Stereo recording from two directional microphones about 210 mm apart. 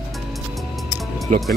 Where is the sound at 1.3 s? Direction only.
40° right (ahead or behind).